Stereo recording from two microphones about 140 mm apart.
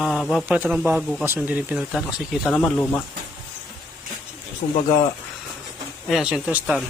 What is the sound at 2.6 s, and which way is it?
Speech, 10° left (ahead or behind).